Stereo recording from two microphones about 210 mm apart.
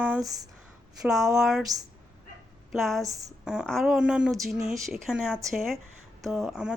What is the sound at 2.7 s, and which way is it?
Speech, centre (ahead or behind).